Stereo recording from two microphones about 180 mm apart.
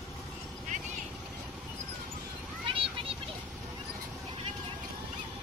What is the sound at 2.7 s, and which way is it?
Vehicle, 30° right (ahead or behind).